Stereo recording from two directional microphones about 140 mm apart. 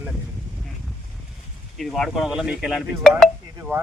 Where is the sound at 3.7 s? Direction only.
15° right (ahead or behind).